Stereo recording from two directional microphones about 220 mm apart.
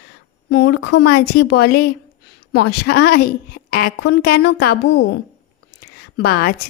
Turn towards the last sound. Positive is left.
turn(degrees=45)  # may be behind; listen again after turning